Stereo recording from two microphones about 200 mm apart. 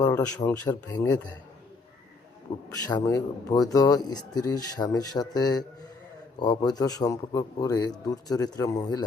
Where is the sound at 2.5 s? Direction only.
25° left (ahead or behind).